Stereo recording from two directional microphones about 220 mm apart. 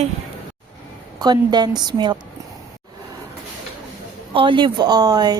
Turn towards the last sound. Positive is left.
turn(degrees=-20)  # may be behind; listen again after turning